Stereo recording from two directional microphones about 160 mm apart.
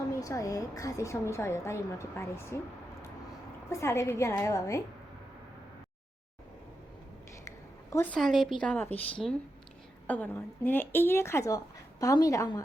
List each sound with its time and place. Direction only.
0.1 s speech: 20° left (ahead or behind)
3.7 s speech: 20° left (ahead or behind)
7.4 s a sound: 20° left (ahead or behind)
8.1 s a woman's voice: centre (ahead or behind); by 12.6 s 20° left (ahead or behind)